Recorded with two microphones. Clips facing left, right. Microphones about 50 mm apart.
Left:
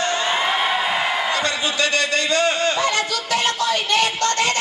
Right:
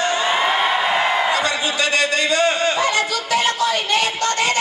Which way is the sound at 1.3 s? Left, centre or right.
Centre.